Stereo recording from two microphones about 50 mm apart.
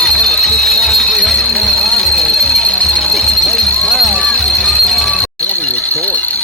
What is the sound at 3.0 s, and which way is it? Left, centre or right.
Music, centre.